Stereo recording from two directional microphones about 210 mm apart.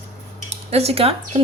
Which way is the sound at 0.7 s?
30° right (ahead or behind).